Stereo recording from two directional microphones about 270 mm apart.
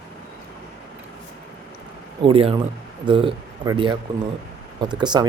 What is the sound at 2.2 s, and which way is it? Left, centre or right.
Speech, centre.